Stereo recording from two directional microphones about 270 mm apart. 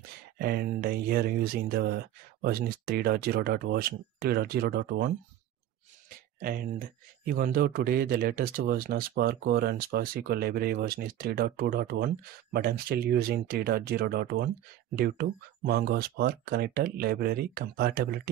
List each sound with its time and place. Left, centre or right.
0.4 s speech: right